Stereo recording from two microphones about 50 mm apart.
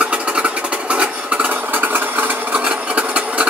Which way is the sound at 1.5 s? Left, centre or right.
Right.